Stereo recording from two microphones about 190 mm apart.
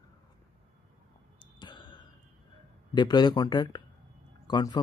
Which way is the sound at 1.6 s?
25° left (ahead or behind).